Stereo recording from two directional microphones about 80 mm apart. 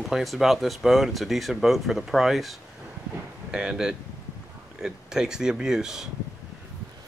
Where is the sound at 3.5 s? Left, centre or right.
Centre.